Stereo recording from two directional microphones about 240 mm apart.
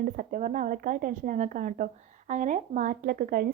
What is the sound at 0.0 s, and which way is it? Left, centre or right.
A woman's voice, right.